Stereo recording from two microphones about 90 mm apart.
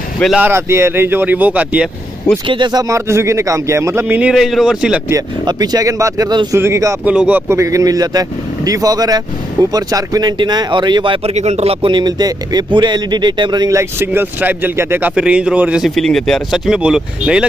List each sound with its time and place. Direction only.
0.4 s speech: 30° right (ahead or behind)
2.4 s speech: 60° right (ahead or behind); by 4.3 s 25° right (ahead or behind)
4.3 s a man's voice: centre (ahead or behind)
5.5 s speech: 50° right (ahead or behind); by 7.0 s 35° right (ahead or behind)
7.1 s a man's voice: 15° right (ahead or behind)
7.4 s speech: 30° right (ahead or behind)
10.4 s speech: 55° right (ahead or behind)
13.7 s speech: 30° right (ahead or behind)
15.1 s a man's voice: 10° right (ahead or behind)
15.8 s speech: 5° left (ahead or behind)